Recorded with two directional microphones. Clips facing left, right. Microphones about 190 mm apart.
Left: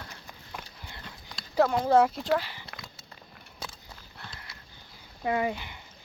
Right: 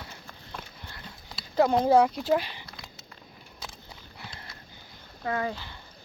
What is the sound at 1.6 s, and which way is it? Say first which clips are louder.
Speech: right 3 dB; 20° right (ahead or behind).